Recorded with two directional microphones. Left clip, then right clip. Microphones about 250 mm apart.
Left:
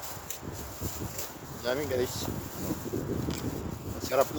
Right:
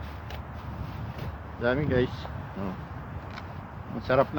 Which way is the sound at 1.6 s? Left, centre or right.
Centre.